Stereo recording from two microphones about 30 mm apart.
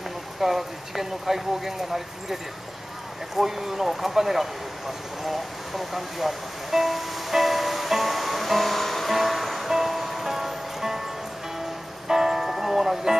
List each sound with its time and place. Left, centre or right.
0.4 s speech: centre
3.3 s a sound: centre
9.7 s music: centre
12.1 s music: centre